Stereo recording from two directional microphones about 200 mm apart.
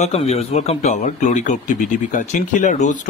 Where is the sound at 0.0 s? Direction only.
30° left (ahead or behind).